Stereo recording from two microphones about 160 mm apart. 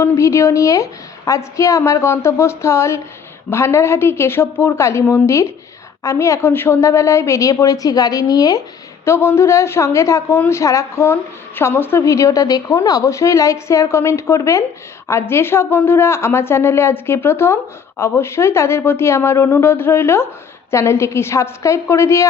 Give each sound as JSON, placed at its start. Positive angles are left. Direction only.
{"t": 0.0, "sound": "a woman's voice", "side_deg": 15}